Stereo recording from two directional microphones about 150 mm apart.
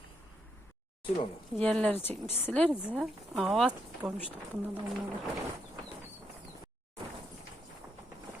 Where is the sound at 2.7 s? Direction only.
5° right (ahead or behind).